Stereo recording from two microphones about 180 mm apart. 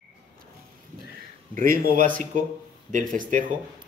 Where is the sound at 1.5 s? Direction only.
50° right (ahead or behind).